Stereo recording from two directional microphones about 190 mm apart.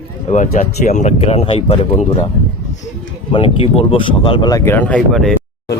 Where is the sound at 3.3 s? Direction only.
25° left (ahead or behind); by 5.3 s 5° left (ahead or behind).